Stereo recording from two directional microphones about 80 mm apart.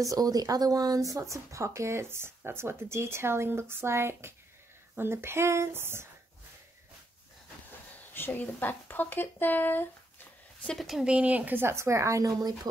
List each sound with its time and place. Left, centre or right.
0.0 s speech: right
8.1 s speech: left
10.6 s speech: centre
10.9 s speech: centre
11.1 s speech: centre; by 12.5 s right